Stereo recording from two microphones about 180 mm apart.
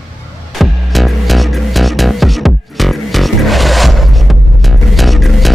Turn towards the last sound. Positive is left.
turn(degrees=0)  # may be behind; listen again after turning